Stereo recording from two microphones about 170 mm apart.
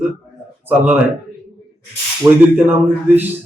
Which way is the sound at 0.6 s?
10° right (ahead or behind).